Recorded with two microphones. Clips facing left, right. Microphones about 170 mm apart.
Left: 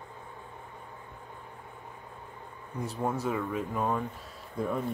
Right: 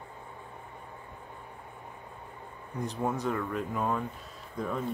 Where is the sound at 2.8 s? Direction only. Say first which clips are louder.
Even; centre (ahead or behind).